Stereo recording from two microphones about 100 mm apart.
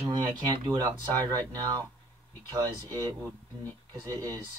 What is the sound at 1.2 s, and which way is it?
Speech, 40° right (ahead or behind).